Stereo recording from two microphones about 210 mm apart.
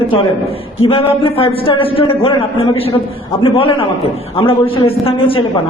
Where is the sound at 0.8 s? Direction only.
25° left (ahead or behind).